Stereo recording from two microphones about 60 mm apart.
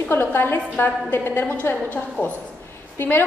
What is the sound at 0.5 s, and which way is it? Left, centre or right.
A woman's voice, left.